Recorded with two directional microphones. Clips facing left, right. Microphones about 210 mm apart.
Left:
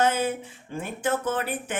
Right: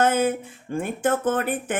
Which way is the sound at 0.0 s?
50° right (ahead or behind).